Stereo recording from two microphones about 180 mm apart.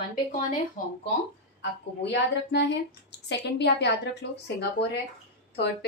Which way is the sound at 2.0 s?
75° left (ahead or behind).